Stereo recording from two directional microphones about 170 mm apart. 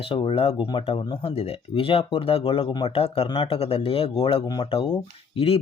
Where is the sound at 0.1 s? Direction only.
30° left (ahead or behind).